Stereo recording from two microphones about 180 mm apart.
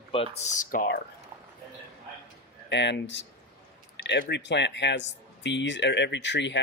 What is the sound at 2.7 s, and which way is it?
Speech, 75° left (ahead or behind).